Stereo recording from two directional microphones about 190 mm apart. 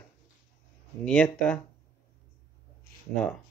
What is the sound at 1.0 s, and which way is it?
Speech, 5° left (ahead or behind).